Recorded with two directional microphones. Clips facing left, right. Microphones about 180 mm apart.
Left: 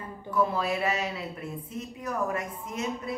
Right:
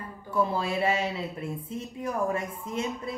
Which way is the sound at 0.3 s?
30° right (ahead or behind).